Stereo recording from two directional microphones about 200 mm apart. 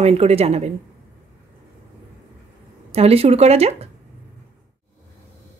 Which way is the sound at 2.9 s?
30° right (ahead or behind).